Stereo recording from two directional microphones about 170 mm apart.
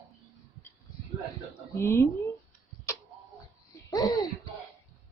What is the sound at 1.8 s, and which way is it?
Speech, 15° left (ahead or behind).